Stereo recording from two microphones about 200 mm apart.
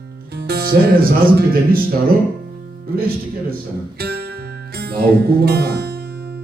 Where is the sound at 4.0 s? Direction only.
55° right (ahead or behind).